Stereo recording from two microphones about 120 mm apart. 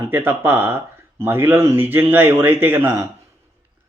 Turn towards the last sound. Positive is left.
turn(degrees=-20)  # may be behind; listen again after turning